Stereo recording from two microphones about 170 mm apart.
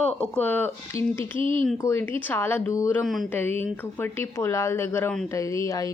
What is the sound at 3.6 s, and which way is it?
A woman's voice, 10° left (ahead or behind).